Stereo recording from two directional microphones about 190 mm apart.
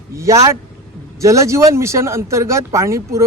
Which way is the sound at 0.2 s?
15° right (ahead or behind).